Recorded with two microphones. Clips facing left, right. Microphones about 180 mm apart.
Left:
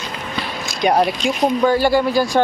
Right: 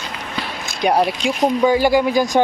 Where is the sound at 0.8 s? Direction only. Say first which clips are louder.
Left 1 dB; 5° right (ahead or behind).